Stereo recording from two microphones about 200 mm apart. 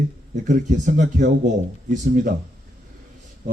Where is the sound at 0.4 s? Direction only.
40° right (ahead or behind).